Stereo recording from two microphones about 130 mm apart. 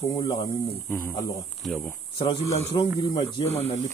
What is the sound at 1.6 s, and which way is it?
Speech, centre (ahead or behind).